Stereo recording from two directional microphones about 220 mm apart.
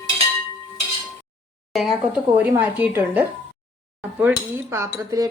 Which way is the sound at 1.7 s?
Centre (ahead or behind).